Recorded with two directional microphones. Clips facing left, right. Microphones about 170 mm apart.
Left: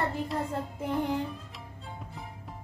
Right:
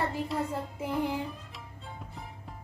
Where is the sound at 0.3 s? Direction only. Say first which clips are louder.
Even; 5° right (ahead or behind).